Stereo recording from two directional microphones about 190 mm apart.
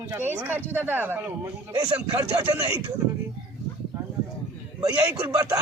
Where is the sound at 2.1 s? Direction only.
25° right (ahead or behind).